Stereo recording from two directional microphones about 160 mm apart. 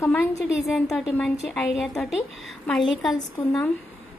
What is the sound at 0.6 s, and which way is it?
A woman's voice, centre (ahead or behind).